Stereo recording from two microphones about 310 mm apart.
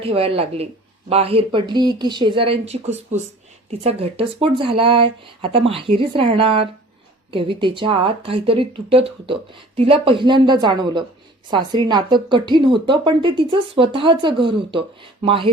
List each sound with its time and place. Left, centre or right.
0.0 s a woman's voice: centre